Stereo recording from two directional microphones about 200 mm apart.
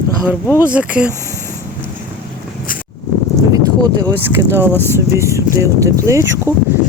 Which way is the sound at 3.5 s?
20° right (ahead or behind).